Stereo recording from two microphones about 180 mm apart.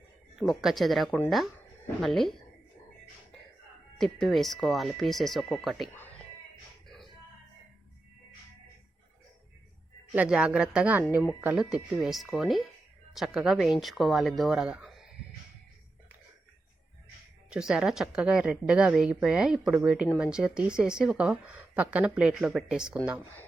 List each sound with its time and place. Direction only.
0.3 s a woman's voice: centre (ahead or behind)
3.9 s a woman's voice: centre (ahead or behind)
10.1 s a woman's voice: 5° right (ahead or behind)
17.5 s a woman's voice: 5° right (ahead or behind)